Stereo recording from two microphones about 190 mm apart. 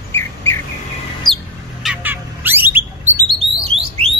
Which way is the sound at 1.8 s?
10° right (ahead or behind).